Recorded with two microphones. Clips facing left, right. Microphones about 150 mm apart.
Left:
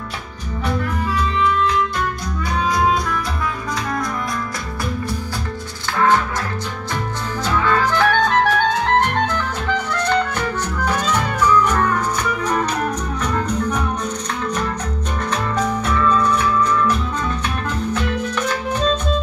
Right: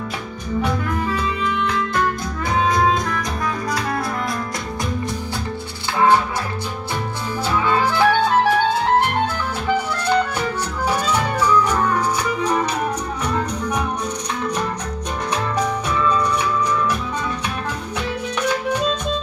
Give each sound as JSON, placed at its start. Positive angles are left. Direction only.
{"t": 5.9, "sound": "music", "side_deg": -10}
{"t": 7.4, "sound": "music", "side_deg": -15}
{"t": 13.2, "sound": "music", "side_deg": -10}
{"t": 15.6, "sound": "music", "side_deg": -10}
{"t": 17.9, "sound": "music", "side_deg": -10}